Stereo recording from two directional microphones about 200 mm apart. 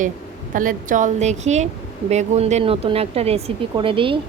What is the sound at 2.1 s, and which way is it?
Speech, 35° right (ahead or behind).